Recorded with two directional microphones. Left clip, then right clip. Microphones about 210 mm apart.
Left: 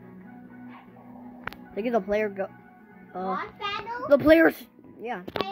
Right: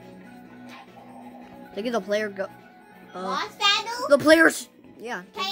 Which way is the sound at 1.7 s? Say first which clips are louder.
Even; centre (ahead or behind).